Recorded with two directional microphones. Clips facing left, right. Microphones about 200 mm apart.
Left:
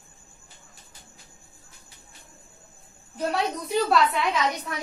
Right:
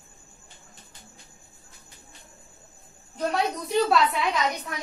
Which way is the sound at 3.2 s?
Centre (ahead or behind).